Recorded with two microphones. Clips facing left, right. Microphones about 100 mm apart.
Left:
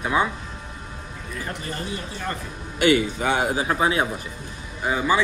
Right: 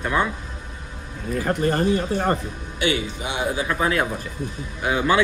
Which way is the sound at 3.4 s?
35° left (ahead or behind).